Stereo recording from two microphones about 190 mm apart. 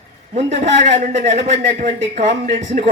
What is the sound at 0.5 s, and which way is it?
A woman's voice, 40° right (ahead or behind).